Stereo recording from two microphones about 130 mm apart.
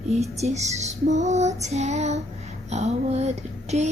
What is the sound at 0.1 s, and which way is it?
Female singing, 55° right (ahead or behind).